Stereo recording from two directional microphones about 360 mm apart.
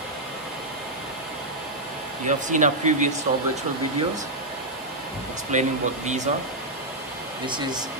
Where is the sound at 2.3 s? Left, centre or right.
Centre.